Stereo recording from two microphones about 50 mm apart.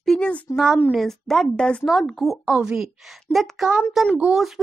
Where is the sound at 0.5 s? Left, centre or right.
Left.